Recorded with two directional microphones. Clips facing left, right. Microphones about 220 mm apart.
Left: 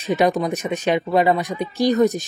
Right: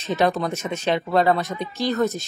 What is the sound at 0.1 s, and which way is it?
Speech, 15° left (ahead or behind).